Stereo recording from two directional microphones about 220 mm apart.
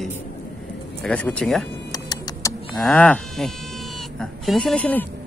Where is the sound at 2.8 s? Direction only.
5° left (ahead or behind).